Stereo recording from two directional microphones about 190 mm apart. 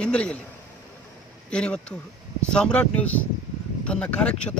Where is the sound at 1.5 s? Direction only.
5° left (ahead or behind).